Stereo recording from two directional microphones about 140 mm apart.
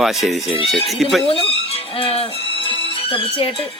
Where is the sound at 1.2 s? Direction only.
45° left (ahead or behind).